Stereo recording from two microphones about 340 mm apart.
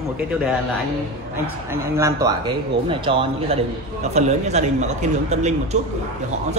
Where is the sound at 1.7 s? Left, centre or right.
Centre.